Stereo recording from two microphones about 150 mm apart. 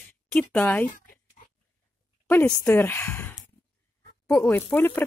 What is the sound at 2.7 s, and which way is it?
Speech, 15° left (ahead or behind).